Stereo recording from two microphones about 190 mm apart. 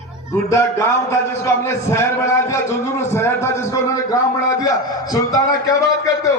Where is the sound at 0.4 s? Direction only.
15° left (ahead or behind).